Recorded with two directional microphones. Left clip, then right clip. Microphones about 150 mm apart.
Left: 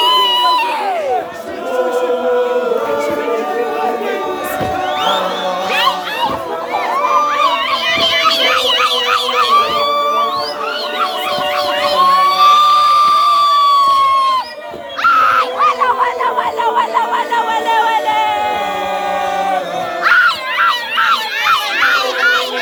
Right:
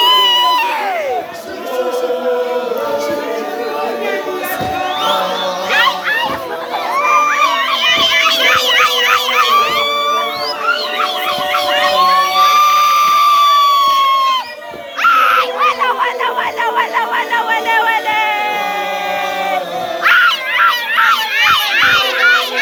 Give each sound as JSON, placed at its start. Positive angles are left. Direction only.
{"t": 0.0, "sound": "baby cry", "side_deg": -5}
{"t": 7.9, "sound": "a sound", "side_deg": 15}
{"t": 9.7, "sound": "music", "side_deg": 35}
{"t": 11.5, "sound": "a sound", "side_deg": 0}
{"t": 15.0, "sound": "screaming", "side_deg": -5}
{"t": 16.6, "sound": "music", "side_deg": 0}
{"t": 20.1, "sound": "dog", "side_deg": -5}